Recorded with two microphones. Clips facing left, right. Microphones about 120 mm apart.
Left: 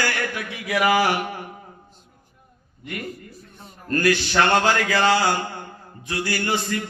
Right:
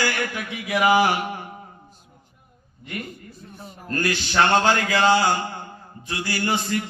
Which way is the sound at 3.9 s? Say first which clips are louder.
Left 3 dB; 20° right (ahead or behind).